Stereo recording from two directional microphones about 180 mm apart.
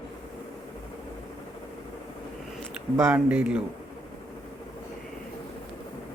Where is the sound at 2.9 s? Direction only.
15° right (ahead or behind).